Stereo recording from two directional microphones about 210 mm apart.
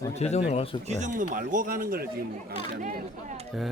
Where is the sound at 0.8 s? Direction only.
35° right (ahead or behind).